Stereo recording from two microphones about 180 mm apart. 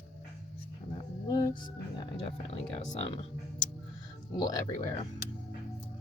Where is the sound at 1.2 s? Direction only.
20° left (ahead or behind).